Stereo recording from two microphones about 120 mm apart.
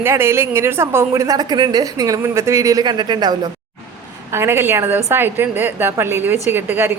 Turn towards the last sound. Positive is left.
turn(degrees=-15)  # may be behind; listen again after turning